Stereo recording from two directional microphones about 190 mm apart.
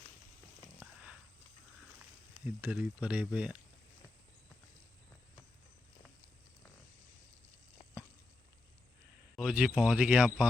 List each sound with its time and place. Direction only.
0.9 s pig: 5° right (ahead or behind)
2.5 s speech: 10° right (ahead or behind)
9.3 s speech: centre (ahead or behind)